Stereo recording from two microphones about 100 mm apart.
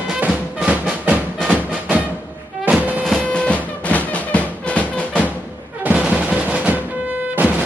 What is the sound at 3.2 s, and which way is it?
Music, 10° left (ahead or behind).